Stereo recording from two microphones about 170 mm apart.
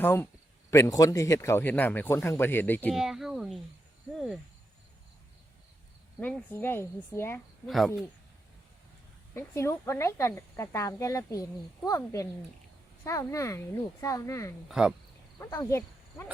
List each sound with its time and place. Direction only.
0.0 s speech: 10° left (ahead or behind)
2.9 s speech: centre (ahead or behind)
6.1 s speech: 10° left (ahead or behind)
9.3 s speech: 15° left (ahead or behind)
14.7 s speech: 5° right (ahead or behind)
15.4 s speech: 15° left (ahead or behind)